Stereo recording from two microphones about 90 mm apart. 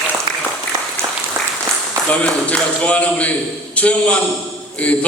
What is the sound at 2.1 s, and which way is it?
A man's voice, 15° left (ahead or behind).